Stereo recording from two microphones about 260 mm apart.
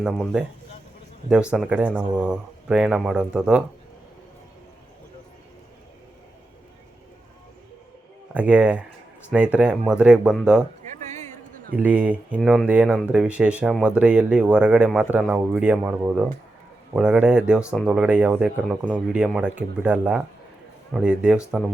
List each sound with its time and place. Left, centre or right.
0.0 s speech: centre
8.3 s speech: centre
11.0 s a sound: right
11.8 s speech: centre